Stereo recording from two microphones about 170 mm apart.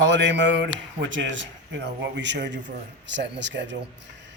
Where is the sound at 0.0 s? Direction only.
90° right.